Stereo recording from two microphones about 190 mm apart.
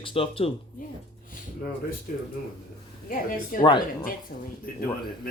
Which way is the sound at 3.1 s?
45° left (ahead or behind).